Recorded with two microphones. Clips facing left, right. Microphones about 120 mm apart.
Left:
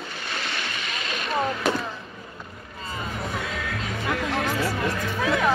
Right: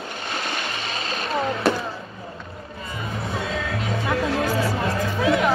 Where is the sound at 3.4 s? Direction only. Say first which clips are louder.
Right 4 dB; 30° right (ahead or behind).